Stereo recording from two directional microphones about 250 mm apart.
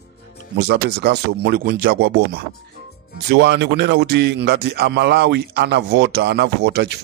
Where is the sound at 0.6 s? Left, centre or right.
Right.